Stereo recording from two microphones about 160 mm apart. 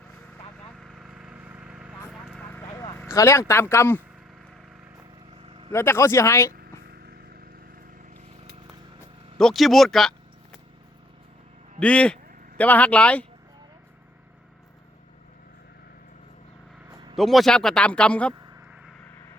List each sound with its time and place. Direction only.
0.8 s vehicle: centre (ahead or behind); by 4.0 s 15° left (ahead or behind)
5.5 s vehicle: 35° right (ahead or behind)
5.7 s speech: 15° left (ahead or behind)
9.4 s a man's voice: centre (ahead or behind)
11.8 s speech: 5° left (ahead or behind)
17.2 s a man's voice: centre (ahead or behind)